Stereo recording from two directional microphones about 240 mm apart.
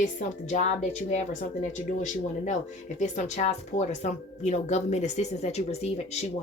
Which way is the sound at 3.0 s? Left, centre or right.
Left.